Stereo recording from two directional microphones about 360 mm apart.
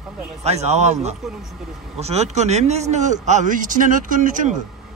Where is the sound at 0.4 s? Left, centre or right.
Centre.